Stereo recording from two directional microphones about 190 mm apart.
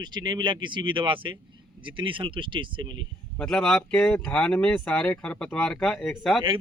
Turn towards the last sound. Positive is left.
turn(degrees=5)  # may be behind; listen again after turning